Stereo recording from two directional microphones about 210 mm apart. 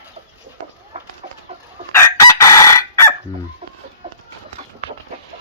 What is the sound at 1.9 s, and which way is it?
Chicken, 15° left (ahead or behind).